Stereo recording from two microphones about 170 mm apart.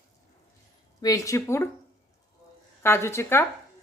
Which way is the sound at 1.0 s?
20° left (ahead or behind).